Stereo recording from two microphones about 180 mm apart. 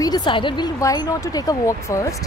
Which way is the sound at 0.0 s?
25° left (ahead or behind).